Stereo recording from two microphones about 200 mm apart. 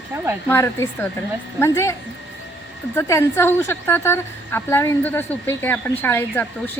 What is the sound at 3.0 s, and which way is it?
A woman's voice, 15° left (ahead or behind).